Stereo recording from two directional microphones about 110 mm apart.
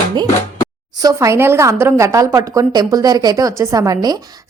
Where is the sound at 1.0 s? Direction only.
30° right (ahead or behind).